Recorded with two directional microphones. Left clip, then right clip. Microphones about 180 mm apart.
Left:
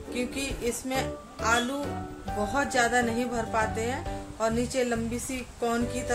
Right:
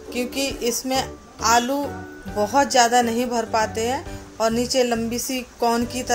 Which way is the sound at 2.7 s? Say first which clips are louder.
Right 6 dB; 35° right (ahead or behind).